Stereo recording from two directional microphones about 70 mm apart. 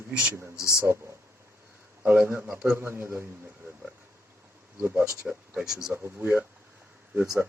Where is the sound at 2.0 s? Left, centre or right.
Right.